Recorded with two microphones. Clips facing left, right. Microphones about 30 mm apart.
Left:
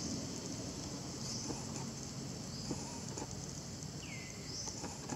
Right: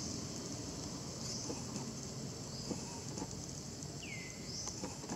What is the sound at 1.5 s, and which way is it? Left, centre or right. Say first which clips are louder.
Vehicle: even; centre.